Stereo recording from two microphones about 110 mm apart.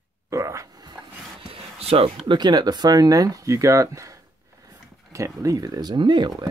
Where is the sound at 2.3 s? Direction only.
40° right (ahead or behind).